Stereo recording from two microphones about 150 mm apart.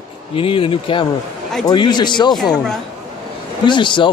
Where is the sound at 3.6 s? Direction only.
30° left (ahead or behind).